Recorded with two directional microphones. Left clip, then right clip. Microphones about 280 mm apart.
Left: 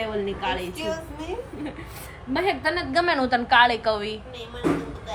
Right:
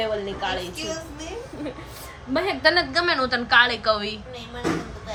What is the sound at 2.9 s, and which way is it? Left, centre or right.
A woman's voice, centre.